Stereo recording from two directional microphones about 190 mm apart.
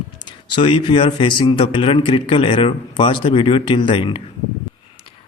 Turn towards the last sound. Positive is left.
turn(degrees=25)  # may be behind; listen again after turning